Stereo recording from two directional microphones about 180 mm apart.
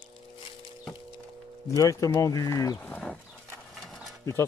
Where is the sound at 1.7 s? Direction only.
20° left (ahead or behind).